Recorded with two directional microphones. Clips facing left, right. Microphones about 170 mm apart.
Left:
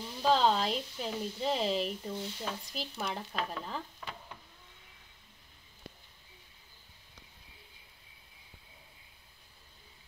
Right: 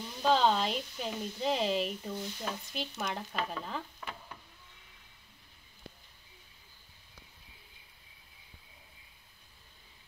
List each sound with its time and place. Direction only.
0.2 s speech: centre (ahead or behind)
2.1 s speech: 25° left (ahead or behind)
2.4 s speech: centre (ahead or behind)